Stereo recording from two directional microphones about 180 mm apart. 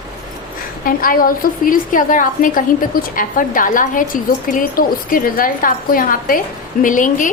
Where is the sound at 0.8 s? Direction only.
50° left (ahead or behind).